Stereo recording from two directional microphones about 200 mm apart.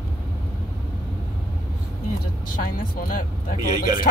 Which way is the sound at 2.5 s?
45° left (ahead or behind).